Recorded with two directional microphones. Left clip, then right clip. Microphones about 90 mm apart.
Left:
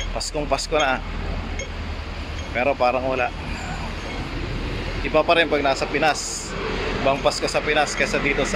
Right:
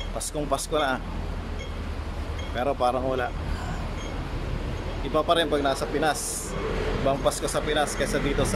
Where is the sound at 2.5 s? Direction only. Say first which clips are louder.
Left 5 dB; 10° right (ahead or behind).